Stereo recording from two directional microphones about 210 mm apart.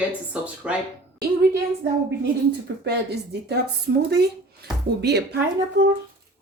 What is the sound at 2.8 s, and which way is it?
Speech, 50° right (ahead or behind).